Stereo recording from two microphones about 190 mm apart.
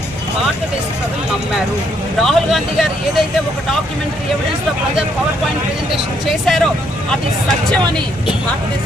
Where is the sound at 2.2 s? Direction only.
Centre (ahead or behind).